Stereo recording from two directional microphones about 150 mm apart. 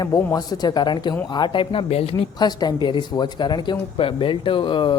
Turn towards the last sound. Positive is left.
turn(degrees=35)  # may be behind; listen again after turning